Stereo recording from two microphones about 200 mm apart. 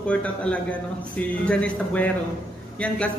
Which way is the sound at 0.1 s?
5° left (ahead or behind).